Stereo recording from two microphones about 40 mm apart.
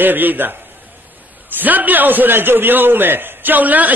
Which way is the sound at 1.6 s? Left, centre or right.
Right.